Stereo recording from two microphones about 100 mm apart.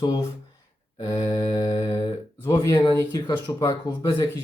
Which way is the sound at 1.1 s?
40° left (ahead or behind).